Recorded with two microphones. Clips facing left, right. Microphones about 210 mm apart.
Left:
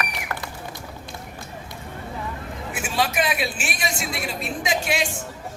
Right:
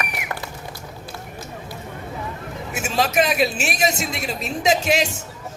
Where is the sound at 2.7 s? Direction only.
40° right (ahead or behind).